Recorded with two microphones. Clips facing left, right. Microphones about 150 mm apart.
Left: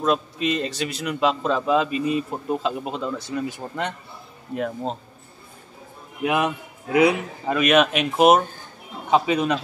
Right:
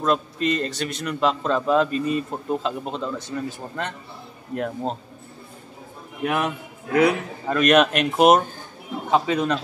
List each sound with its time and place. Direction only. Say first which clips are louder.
0.0 s a man's voice: even; 5° left (ahead or behind)
4.6 s a man's voice: even; centre (ahead or behind)
6.2 s a man's voice: left 2 dB; 15° left (ahead or behind)
9.1 s speech: left 1 dB; 10° left (ahead or behind)